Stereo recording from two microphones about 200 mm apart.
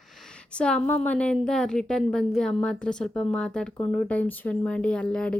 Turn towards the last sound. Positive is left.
turn(degrees=5)  # may be behind; listen again after turning